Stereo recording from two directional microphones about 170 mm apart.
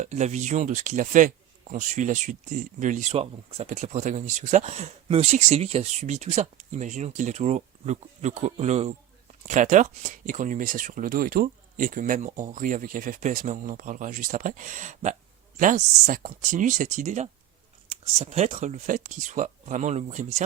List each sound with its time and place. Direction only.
0.0 s speech: 40° right (ahead or behind)